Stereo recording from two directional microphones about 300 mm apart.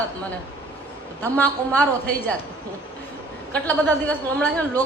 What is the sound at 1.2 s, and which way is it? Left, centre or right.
Speech, centre.